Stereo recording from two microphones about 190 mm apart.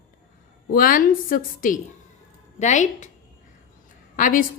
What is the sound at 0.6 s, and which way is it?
A woman's voice, 50° left (ahead or behind).